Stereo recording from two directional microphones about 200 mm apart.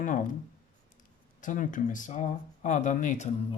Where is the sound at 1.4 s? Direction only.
40° left (ahead or behind).